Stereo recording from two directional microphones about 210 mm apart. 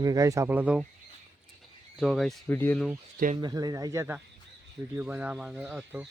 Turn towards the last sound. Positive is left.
turn(degrees=-5)  # may be behind; listen again after turning